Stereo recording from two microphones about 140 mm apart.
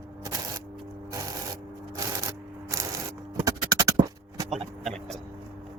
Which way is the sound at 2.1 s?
25° right (ahead or behind).